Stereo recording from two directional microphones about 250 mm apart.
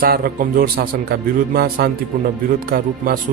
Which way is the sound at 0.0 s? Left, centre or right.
Right.